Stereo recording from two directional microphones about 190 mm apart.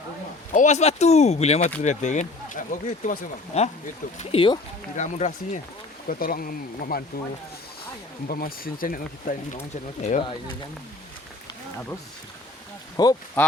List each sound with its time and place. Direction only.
0.5 s speech: 40° left (ahead or behind)
4.9 s speech: 40° left (ahead or behind)
6.1 s speech: 50° left (ahead or behind)
8.3 s speech: 50° left (ahead or behind)
13.0 s speech: 20° left (ahead or behind)